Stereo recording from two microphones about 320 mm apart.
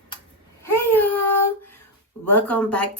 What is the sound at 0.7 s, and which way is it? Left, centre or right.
Baby cry, left.